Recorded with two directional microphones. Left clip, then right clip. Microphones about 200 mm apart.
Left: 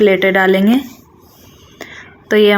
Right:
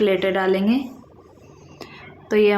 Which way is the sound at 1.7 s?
20° left (ahead or behind).